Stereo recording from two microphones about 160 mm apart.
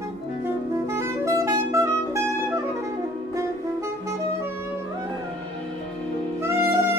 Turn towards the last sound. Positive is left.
turn(degrees=-15)  # may be behind; listen again after turning